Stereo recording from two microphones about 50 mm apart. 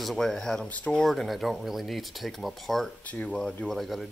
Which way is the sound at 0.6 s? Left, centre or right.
Left.